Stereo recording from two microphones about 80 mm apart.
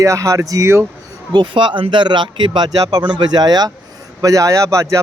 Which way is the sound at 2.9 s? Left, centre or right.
Right.